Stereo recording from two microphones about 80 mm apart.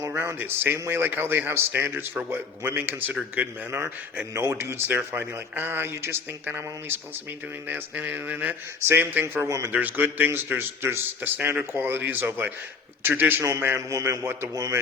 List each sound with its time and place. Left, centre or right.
0.0 s a man's voice: right
4.4 s a man's voice: right
9.2 s a man's voice: right
9.7 s a man's voice: right